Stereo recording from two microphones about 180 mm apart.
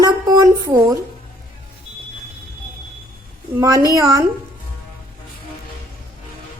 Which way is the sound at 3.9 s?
20° right (ahead or behind).